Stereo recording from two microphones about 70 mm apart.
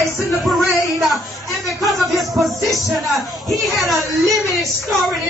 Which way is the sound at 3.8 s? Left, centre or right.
Centre.